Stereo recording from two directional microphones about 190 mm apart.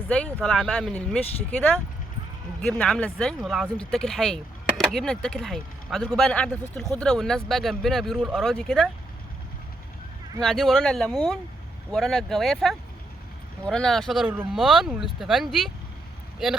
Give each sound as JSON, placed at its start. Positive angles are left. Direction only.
{"t": 0.4, "sound": "speech", "side_deg": 5}
{"t": 10.4, "sound": "speech", "side_deg": 0}